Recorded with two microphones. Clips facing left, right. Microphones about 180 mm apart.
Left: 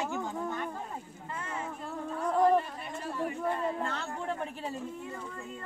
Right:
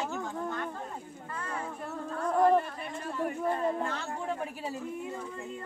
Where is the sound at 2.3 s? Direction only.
Centre (ahead or behind).